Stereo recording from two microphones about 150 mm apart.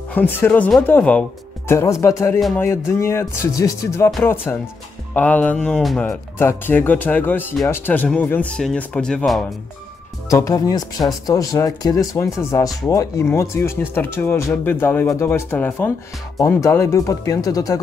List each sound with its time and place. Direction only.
0.1 s speech: 10° left (ahead or behind)
6.0 s speech: 15° left (ahead or behind)
10.3 s speech: 25° left (ahead or behind)